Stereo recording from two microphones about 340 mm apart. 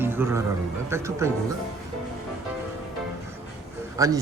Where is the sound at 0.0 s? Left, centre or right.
Centre.